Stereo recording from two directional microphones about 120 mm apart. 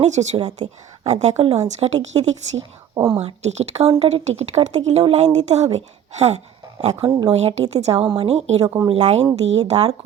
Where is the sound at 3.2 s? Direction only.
65° right (ahead or behind).